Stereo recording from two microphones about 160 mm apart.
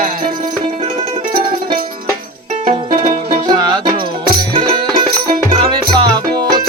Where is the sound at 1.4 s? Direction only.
30° right (ahead or behind).